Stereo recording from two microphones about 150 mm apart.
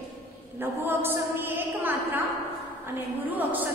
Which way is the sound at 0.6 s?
15° right (ahead or behind).